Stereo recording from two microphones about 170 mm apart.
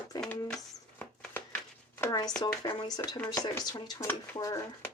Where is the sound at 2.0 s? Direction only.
20° left (ahead or behind).